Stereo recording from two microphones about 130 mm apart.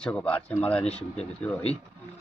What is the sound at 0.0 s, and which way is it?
Speech, 10° left (ahead or behind).